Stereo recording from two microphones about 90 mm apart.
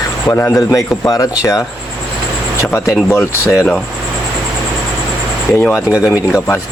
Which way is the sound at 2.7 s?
30° left (ahead or behind).